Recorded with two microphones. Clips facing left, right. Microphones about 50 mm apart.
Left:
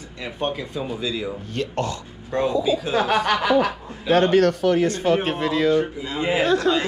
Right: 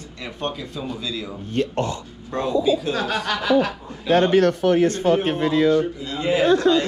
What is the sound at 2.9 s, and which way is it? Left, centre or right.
Speech, left.